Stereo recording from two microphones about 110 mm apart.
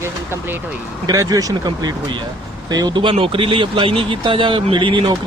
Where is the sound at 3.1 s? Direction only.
55° right (ahead or behind).